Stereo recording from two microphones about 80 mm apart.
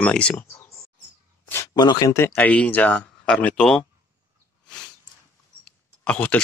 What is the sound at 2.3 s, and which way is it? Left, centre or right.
Speech, centre.